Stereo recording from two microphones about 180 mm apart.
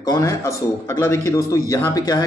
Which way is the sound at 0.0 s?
20° left (ahead or behind).